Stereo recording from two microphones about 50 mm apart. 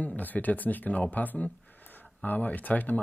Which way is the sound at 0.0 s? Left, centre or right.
Left.